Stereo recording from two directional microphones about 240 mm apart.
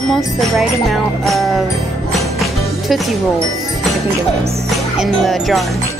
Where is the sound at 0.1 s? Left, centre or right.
Centre.